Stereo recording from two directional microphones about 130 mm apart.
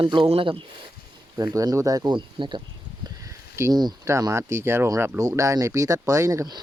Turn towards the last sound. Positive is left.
turn(degrees=-30)  # may be behind; listen again after turning